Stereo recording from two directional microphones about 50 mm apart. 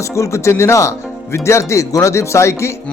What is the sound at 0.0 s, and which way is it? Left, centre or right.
Speech, left.